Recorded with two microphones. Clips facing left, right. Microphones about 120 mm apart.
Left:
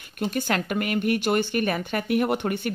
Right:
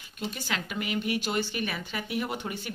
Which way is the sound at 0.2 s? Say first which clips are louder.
Left 8 dB; 50° left (ahead or behind).